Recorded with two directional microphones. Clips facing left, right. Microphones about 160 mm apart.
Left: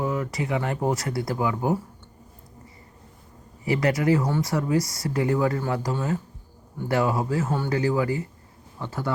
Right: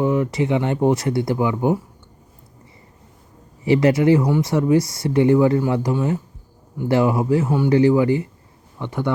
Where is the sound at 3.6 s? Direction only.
25° right (ahead or behind).